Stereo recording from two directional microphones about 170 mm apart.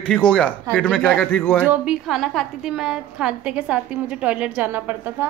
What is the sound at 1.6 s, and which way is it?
A woman's voice, 10° right (ahead or behind).